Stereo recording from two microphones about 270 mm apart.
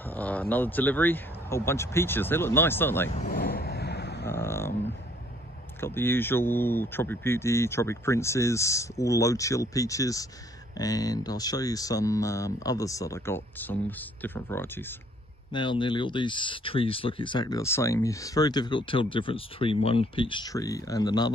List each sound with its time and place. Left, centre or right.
0.0 s speech: centre
3.2 s vehicle: left
4.3 s a sound: centre
5.8 s speech: centre